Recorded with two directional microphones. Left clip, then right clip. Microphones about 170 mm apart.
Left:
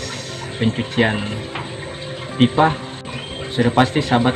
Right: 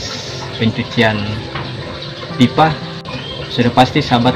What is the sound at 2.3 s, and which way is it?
Speech, 5° left (ahead or behind).